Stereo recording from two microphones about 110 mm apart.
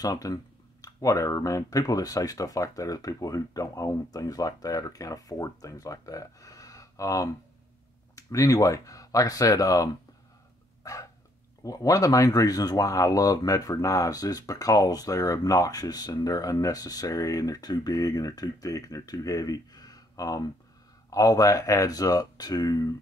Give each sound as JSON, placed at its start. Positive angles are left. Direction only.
{"t": 0.0, "sound": "speech", "side_deg": 35}
{"t": 10.8, "sound": "a sound", "side_deg": 30}
{"t": 11.6, "sound": "speech", "side_deg": 30}